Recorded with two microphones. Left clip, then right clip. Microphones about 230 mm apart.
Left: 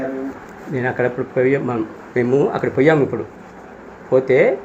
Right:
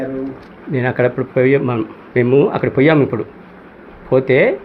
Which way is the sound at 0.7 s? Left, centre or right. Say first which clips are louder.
Right 3 dB; right.